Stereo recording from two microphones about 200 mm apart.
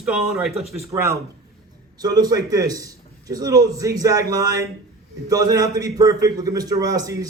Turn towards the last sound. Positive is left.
turn(degrees=-20)  # may be behind; listen again after turning